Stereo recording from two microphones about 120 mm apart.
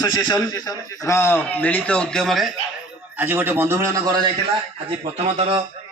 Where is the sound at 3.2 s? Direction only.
15° right (ahead or behind).